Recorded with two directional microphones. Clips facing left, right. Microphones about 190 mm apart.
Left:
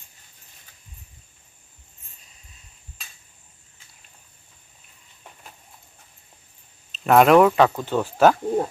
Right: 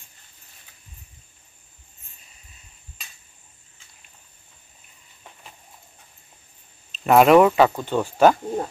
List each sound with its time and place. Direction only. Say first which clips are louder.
6.9 s speech: right 1 dB; centre (ahead or behind)